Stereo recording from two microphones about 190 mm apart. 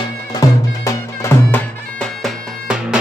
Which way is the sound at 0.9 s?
15° left (ahead or behind).